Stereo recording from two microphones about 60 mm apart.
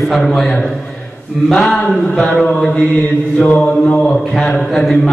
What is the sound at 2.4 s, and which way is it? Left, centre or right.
Speech, centre.